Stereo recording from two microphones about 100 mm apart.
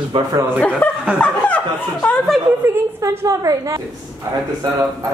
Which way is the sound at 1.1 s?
15° left (ahead or behind).